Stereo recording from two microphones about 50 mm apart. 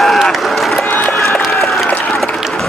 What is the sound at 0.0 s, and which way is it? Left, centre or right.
Run, centre.